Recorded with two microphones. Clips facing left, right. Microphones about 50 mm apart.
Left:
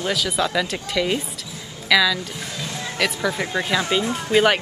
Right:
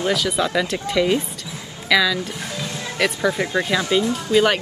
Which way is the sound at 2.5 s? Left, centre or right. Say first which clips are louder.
Right 2 dB; right.